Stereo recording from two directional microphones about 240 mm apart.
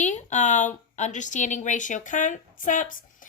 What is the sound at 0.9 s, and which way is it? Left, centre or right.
A woman's voice, left.